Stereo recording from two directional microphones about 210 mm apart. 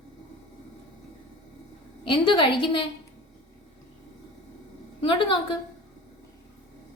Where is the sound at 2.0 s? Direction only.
25° left (ahead or behind).